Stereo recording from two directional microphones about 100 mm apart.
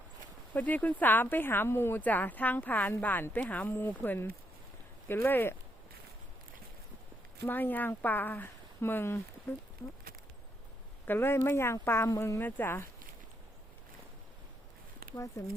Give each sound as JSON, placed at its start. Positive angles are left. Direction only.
{"t": 0.5, "sound": "speech", "side_deg": 15}
{"t": 7.4, "sound": "speech", "side_deg": 20}
{"t": 11.0, "sound": "speech", "side_deg": 20}
{"t": 12.4, "sound": "speech", "side_deg": 20}
{"t": 15.1, "sound": "speech", "side_deg": 35}